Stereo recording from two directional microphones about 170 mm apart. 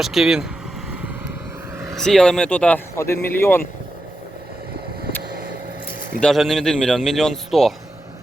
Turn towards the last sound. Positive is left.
turn(degrees=0)  # may be behind; listen again after turning